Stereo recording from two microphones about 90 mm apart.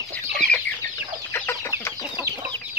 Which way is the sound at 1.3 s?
25° left (ahead or behind).